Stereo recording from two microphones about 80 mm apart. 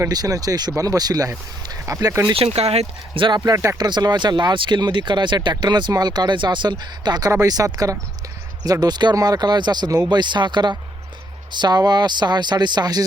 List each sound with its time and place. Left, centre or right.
0.1 s speech: right
1.9 s speech: right
3.2 s speech: right
3.4 s speech: right
3.8 s speech: right
7.4 s speech: right
9.1 s speech: right